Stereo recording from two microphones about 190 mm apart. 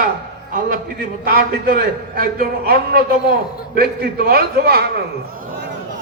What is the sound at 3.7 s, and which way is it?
A man's voice, 55° right (ahead or behind).